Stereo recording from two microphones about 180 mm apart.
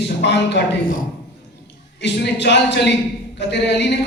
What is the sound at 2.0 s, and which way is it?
Speech, 75° left (ahead or behind).